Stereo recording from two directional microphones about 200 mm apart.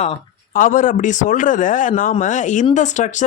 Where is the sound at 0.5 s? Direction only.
40° left (ahead or behind).